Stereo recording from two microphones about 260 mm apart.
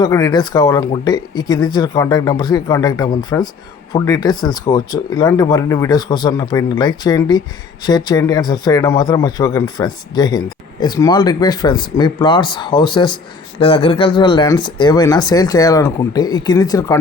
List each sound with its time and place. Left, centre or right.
0.0 s speech: centre